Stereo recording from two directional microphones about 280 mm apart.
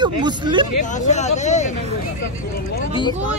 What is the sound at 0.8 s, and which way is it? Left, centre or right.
Speech, left.